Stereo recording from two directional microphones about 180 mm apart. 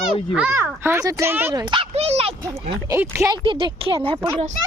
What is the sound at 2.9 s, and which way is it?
Speech, 15° right (ahead or behind).